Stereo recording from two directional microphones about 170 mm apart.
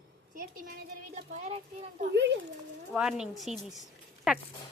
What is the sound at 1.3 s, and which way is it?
Speech, 40° right (ahead or behind).